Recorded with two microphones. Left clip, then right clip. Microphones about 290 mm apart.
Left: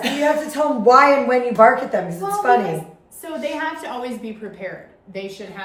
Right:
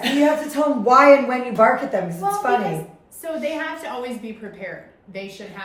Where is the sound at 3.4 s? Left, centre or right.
Centre.